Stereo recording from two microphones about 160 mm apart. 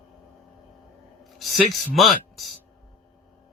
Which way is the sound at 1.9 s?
Centre (ahead or behind).